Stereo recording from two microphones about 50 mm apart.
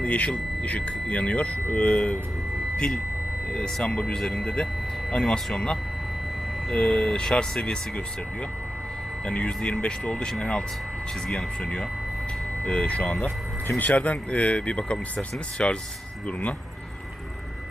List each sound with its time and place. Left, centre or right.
0.0 s speech: left
2.7 s speech: centre
9.2 s speech: left
13.1 s speech: left